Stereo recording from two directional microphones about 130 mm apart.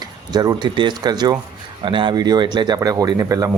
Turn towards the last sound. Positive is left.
turn(degrees=-25)  # may be behind; listen again after turning